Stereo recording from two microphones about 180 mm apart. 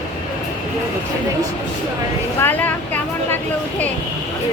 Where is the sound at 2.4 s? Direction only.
10° left (ahead or behind).